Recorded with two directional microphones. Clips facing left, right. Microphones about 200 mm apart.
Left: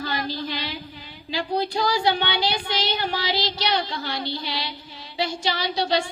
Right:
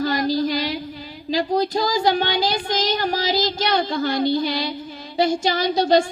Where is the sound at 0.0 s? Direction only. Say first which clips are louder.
Right 8 dB; 40° right (ahead or behind).